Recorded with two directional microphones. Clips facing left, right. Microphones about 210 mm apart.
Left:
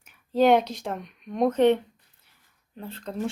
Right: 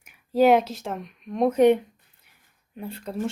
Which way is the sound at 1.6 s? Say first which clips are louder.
Right 4 dB; 10° right (ahead or behind).